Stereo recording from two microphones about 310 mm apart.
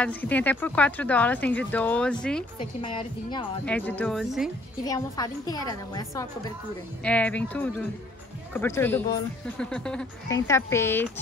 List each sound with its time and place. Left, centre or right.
0.0 s speech: centre
2.6 s speech: centre
4.8 s speech: centre